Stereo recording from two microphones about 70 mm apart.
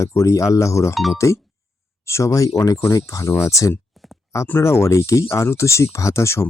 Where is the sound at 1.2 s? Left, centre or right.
Left.